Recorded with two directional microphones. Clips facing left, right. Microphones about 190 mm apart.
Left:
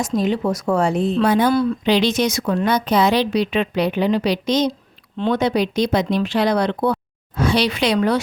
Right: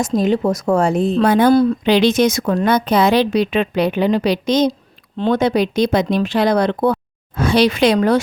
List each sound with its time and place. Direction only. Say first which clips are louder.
0.2 s speech: right 3 dB; 45° right (ahead or behind)